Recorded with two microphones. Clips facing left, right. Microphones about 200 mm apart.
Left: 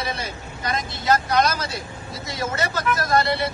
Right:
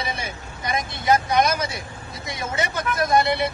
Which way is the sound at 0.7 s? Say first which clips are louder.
Right 1 dB; 15° right (ahead or behind).